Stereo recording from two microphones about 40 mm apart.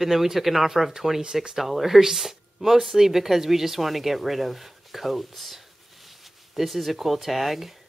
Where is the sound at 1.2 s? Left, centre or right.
Centre.